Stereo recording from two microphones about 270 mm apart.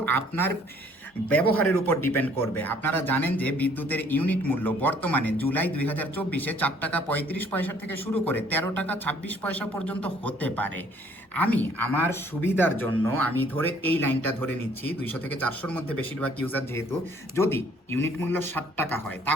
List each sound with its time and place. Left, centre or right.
0.0 s a man's voice: centre